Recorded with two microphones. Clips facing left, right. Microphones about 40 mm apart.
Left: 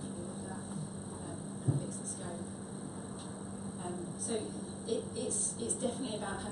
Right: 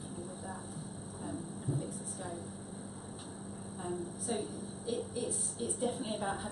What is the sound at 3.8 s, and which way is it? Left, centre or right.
A woman's voice, centre.